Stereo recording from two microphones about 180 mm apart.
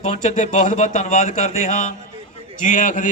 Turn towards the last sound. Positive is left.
turn(degrees=40)  # may be behind; listen again after turning